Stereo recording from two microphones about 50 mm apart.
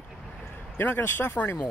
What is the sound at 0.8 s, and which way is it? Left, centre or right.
Speech, left.